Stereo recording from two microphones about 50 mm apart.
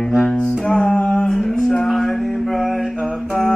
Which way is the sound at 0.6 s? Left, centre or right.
Left.